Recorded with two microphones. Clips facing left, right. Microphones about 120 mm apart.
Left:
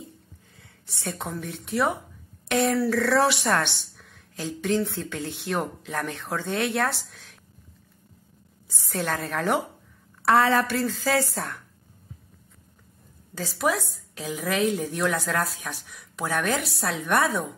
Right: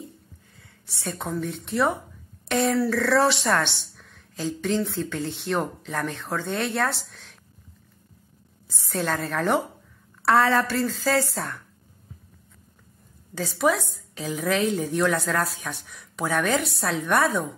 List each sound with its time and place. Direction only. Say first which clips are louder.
0.6 s a sound: left 1 dB; 20° left (ahead or behind)
1.1 s a woman's voice: right 8 dB; centre (ahead or behind)
9.0 s speech: right 2 dB; 5° left (ahead or behind)
10.3 s a woman's voice: even; 15° left (ahead or behind)
13.4 s speech: right 3 dB; centre (ahead or behind)